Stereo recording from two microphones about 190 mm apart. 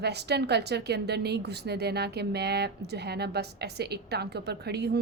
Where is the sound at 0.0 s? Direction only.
60° right (ahead or behind).